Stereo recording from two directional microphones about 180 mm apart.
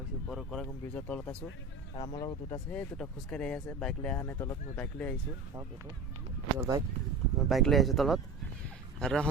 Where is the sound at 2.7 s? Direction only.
5° left (ahead or behind).